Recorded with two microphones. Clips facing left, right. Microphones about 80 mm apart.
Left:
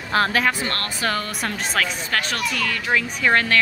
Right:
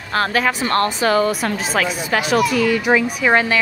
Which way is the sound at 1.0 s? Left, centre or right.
Centre.